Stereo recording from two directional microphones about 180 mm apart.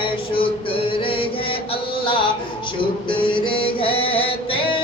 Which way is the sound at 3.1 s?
30° left (ahead or behind).